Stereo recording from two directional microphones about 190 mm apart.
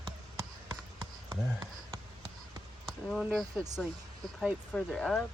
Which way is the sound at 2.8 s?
Centre (ahead or behind).